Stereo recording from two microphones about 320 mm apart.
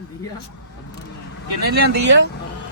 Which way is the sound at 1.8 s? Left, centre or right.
Right.